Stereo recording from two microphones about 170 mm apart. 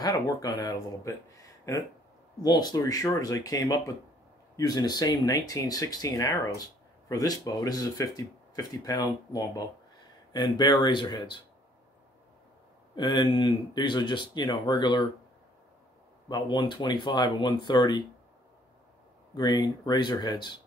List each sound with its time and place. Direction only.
0.0 s speech: 20° left (ahead or behind)
12.9 s speech: 25° left (ahead or behind)
16.3 s speech: 25° left (ahead or behind)
19.3 s speech: 25° left (ahead or behind)